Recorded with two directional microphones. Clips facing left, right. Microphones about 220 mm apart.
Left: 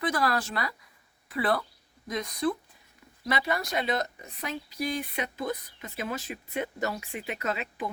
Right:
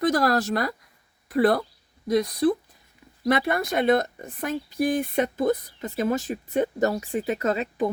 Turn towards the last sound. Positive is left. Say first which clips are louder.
# right 8 dB
turn(degrees=-45)  # may be behind; listen again after turning